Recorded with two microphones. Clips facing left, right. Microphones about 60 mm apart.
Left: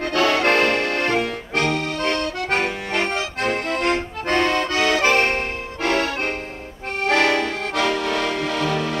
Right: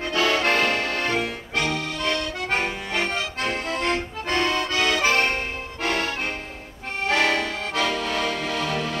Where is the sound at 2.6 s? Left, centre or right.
Left.